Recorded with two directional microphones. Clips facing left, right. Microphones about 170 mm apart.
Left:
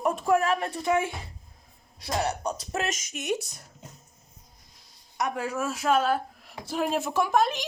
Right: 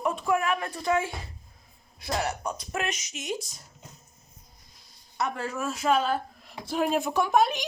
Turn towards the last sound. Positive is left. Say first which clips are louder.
# right 1 dB
turn(degrees=0)  # may be behind; listen again after turning